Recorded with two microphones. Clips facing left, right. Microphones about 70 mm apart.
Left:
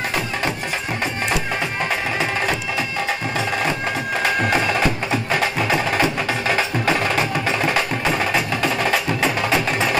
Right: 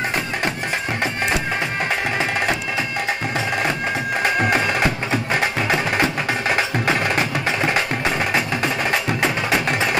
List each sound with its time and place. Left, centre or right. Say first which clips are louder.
5.1 s music: even; right
7.4 s wood block: even; right